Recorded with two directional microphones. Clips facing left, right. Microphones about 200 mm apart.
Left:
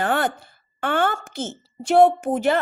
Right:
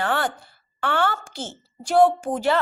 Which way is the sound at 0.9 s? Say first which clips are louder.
Left 2 dB; 50° left (ahead or behind).